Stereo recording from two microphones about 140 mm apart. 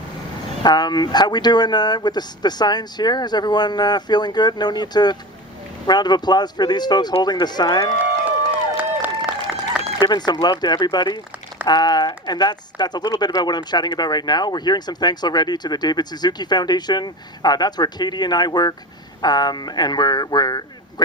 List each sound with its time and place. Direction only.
0.6 s a man's voice: 30° left (ahead or behind)
9.0 s a sound: 10° right (ahead or behind)
10.0 s a man's voice: 30° left (ahead or behind)